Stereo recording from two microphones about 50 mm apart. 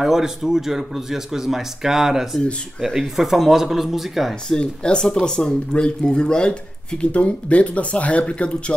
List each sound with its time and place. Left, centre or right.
0.0 s speech: centre
4.5 s speech: centre